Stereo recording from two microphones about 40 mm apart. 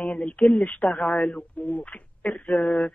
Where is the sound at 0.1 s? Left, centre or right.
Left.